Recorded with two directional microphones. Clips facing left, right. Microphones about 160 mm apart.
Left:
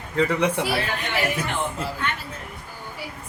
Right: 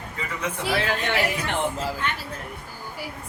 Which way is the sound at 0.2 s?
75° left (ahead or behind).